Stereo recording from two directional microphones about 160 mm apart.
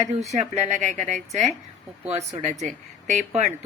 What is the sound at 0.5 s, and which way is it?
Speech, 45° right (ahead or behind).